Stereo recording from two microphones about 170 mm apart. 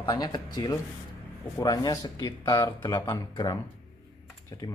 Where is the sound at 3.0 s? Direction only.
20° left (ahead or behind).